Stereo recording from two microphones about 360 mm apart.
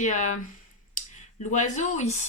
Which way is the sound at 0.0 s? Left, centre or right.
Centre.